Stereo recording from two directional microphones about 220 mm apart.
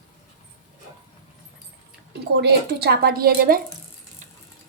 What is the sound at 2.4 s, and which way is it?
A woman's voice, 50° right (ahead or behind).